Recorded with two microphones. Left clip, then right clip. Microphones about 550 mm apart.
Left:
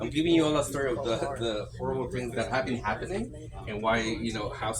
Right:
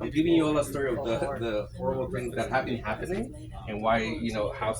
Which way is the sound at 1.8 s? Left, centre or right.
Right.